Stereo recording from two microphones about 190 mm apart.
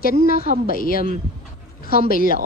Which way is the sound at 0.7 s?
50° left (ahead or behind).